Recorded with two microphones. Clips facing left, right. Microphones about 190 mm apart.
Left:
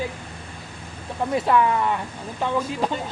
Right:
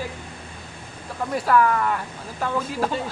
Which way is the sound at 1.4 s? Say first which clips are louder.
Right 2 dB; 20° left (ahead or behind).